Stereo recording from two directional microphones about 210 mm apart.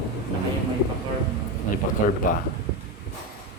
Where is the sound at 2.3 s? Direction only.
40° left (ahead or behind).